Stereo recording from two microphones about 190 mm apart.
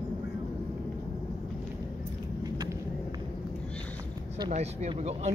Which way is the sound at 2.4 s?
20° right (ahead or behind).